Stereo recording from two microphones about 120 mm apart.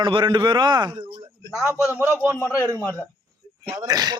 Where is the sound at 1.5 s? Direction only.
25° left (ahead or behind).